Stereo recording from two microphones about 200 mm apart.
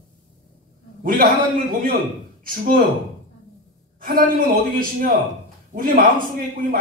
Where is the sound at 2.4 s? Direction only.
45° right (ahead or behind).